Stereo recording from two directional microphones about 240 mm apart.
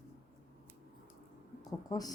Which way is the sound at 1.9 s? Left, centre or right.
Centre.